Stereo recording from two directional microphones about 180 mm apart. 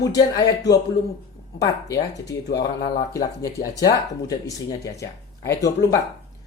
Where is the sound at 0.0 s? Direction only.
20° left (ahead or behind).